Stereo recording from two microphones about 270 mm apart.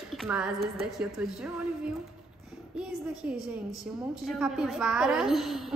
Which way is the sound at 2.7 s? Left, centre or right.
Centre.